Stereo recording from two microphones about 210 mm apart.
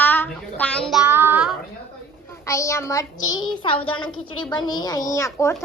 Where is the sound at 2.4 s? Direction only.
15° left (ahead or behind).